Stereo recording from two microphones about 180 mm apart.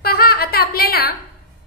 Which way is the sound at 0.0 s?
55° left (ahead or behind).